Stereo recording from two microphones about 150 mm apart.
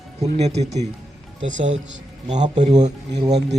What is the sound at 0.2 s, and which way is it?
Speech, 45° right (ahead or behind).